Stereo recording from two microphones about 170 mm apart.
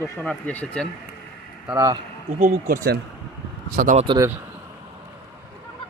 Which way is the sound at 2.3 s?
50° right (ahead or behind).